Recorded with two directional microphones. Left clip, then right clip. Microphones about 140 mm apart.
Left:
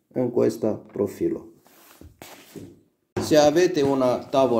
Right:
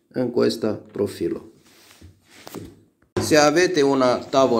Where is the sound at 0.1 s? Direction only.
15° left (ahead or behind).